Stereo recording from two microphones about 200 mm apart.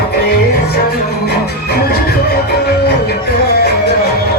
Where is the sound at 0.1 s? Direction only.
50° left (ahead or behind).